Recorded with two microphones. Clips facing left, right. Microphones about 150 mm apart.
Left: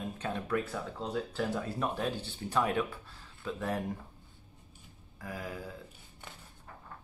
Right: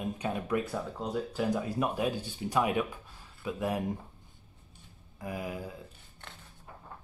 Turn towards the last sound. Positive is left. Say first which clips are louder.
# right 3 dB
turn(degrees=-15)  # may be behind; listen again after turning